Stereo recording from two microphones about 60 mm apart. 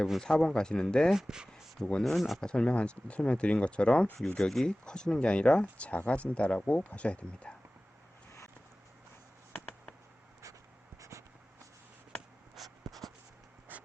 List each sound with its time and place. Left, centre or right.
0.2 s speech: centre
1.1 s speech: centre
1.9 s speech: centre
11.1 s writing: right
12.5 s writing: centre